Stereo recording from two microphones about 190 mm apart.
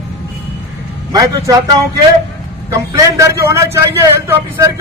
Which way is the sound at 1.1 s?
15° right (ahead or behind).